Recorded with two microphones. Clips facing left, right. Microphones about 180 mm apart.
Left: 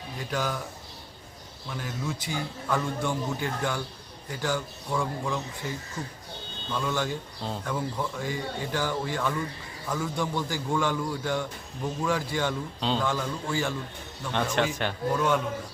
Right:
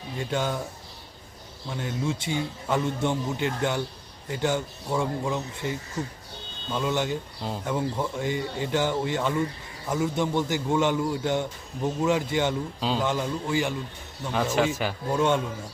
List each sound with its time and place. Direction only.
0.2 s a man's voice: 25° right (ahead or behind)
1.6 s a man's voice: 25° right (ahead or behind)
14.6 s a man's voice: 5° right (ahead or behind)
15.1 s a man's voice: 25° right (ahead or behind)